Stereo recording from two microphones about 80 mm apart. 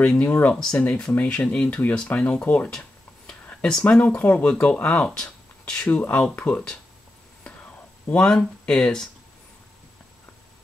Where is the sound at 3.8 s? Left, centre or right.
Centre.